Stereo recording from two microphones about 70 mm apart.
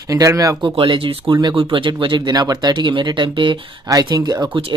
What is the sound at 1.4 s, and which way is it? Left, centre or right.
Speech, right.